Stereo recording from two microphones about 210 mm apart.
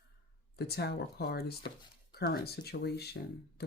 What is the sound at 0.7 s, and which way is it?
Speech, 50° left (ahead or behind).